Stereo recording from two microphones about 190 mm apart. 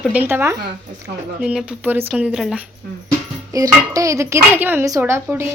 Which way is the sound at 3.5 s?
20° right (ahead or behind).